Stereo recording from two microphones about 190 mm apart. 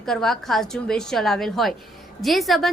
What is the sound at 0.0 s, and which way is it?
A woman's voice, centre (ahead or behind).